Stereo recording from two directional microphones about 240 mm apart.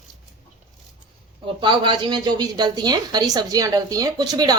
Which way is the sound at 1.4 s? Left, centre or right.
Centre.